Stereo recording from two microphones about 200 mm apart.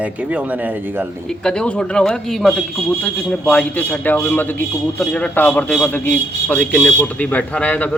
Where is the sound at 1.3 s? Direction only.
5° left (ahead or behind).